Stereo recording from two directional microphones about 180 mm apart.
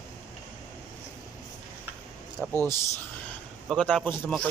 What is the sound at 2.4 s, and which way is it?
Speech, 10° left (ahead or behind).